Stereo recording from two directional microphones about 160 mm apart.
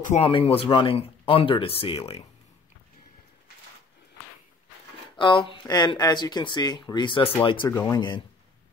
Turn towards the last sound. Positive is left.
turn(degrees=10)  # may be behind; listen again after turning